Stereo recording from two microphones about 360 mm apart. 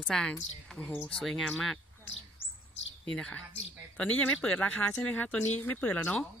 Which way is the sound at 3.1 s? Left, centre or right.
Centre.